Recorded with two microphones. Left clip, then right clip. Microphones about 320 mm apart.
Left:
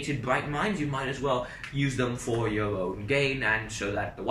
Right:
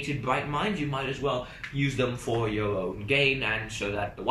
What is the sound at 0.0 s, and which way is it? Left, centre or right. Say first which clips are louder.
Speech: even; centre.